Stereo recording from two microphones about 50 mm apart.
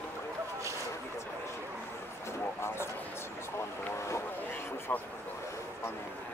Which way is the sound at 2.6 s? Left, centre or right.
Left.